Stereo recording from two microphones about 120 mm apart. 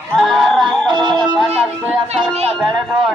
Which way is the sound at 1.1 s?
Centre (ahead or behind).